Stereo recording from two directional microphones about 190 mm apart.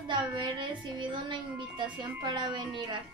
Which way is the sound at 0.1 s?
25° right (ahead or behind).